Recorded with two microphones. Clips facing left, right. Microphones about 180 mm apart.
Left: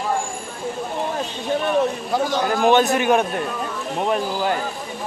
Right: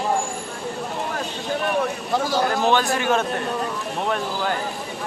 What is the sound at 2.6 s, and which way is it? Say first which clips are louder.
A man's voice: left 4 dB; 20° left (ahead or behind).